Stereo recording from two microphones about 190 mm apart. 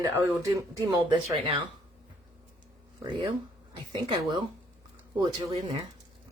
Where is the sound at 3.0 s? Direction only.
25° right (ahead or behind).